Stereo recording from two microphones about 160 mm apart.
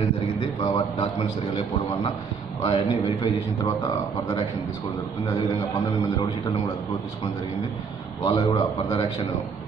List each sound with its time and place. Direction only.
0.4 s a man's voice: 35° left (ahead or behind)
2.6 s a man's voice: 30° left (ahead or behind)
3.6 s a man's voice: 20° left (ahead or behind)
8.3 s a man's voice: 30° left (ahead or behind)